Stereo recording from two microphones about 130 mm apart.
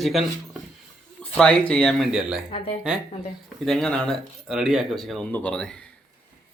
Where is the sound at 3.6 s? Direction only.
5° left (ahead or behind).